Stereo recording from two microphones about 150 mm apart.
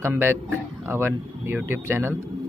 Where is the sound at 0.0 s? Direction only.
15° right (ahead or behind).